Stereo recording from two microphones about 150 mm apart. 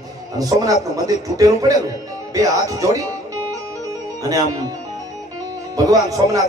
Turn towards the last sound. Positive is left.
turn(degrees=-20)  # may be behind; listen again after turning